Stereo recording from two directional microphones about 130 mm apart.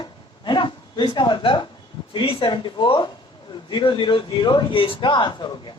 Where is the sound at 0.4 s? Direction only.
35° left (ahead or behind).